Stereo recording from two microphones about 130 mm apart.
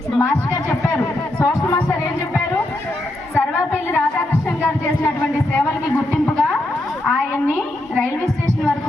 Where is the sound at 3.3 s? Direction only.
15° left (ahead or behind).